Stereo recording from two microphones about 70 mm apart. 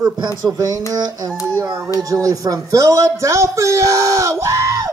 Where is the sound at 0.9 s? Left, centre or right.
Right.